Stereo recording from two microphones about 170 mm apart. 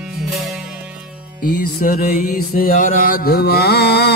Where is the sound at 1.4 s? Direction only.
60° left (ahead or behind).